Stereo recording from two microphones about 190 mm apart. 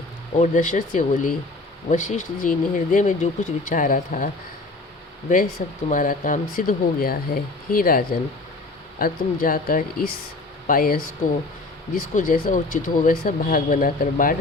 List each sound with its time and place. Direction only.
0.3 s speech: 40° left (ahead or behind)
5.3 s speech: 45° left (ahead or behind)
12.1 s speech: 45° left (ahead or behind)